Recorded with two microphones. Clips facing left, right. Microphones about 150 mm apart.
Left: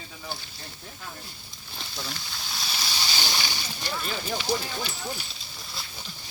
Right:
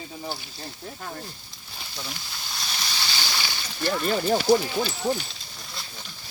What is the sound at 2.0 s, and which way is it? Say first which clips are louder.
Speech: even; centre (ahead or behind).